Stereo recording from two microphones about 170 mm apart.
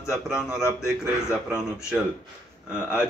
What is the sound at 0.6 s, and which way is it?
Speech, 15° left (ahead or behind).